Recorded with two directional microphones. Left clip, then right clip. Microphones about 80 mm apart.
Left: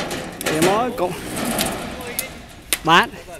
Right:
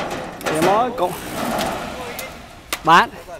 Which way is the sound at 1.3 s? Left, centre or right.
Centre.